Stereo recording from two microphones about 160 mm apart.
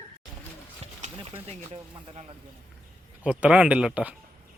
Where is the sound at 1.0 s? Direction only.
40° right (ahead or behind).